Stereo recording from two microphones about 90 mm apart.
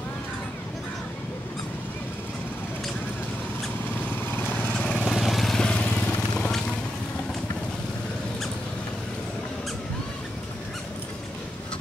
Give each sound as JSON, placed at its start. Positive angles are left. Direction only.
{"t": 4.3, "sound": "vehicle", "side_deg": 20}
{"t": 5.1, "sound": "vehicle", "side_deg": 0}